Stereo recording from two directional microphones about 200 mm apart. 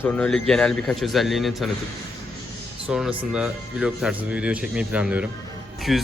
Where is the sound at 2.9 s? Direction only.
5° right (ahead or behind).